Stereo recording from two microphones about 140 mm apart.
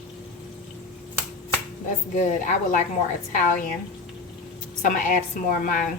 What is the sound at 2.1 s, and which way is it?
A woman's voice, 65° left (ahead or behind).